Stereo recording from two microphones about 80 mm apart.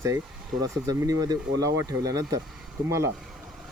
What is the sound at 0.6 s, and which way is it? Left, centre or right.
Speech, right.